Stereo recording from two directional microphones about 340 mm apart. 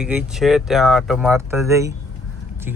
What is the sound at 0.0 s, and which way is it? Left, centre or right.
Speech, centre.